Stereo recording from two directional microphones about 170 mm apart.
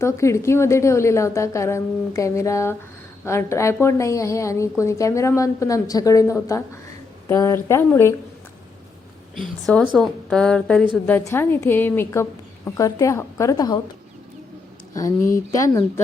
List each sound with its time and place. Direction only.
0.0 s a woman's voice: 15° left (ahead or behind)
9.6 s a woman's voice: centre (ahead or behind); by 13.7 s 20° left (ahead or behind)
15.5 s speech: 20° left (ahead or behind)